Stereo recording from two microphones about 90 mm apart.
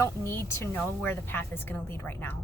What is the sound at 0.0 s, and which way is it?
Speech, 30° left (ahead or behind).